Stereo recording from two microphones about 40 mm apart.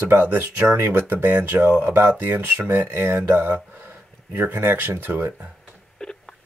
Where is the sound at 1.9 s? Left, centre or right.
Right.